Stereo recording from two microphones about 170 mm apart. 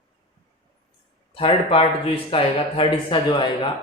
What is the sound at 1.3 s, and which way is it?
Speech, 35° left (ahead or behind).